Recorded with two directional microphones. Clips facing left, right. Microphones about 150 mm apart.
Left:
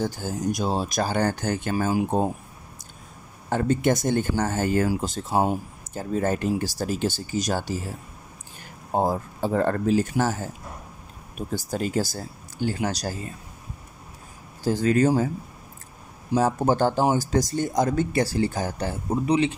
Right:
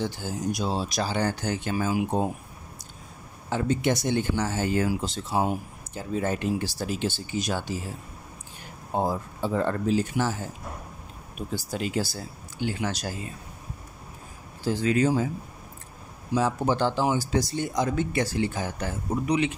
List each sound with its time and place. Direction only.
0.0 s speech: 45° left (ahead or behind)
3.4 s speech: 50° left (ahead or behind)
8.9 s speech: 45° left (ahead or behind)
14.6 s speech: 45° left (ahead or behind)
16.3 s speech: 45° left (ahead or behind); by 19.5 s 30° left (ahead or behind)